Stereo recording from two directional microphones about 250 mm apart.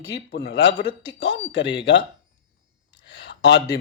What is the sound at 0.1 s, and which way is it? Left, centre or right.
Speech, left.